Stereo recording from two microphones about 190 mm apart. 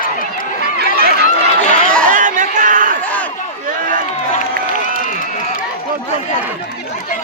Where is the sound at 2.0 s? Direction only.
45° right (ahead or behind).